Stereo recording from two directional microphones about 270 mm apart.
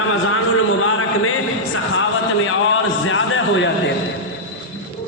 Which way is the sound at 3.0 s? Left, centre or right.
Left.